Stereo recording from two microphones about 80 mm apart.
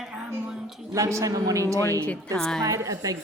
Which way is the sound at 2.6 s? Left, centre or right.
Right.